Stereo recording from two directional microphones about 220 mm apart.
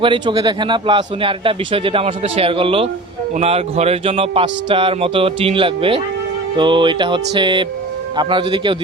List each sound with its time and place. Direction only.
0.0 s speech: 20° right (ahead or behind)